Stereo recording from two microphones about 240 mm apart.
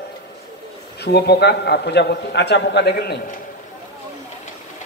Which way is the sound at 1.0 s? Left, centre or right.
Left.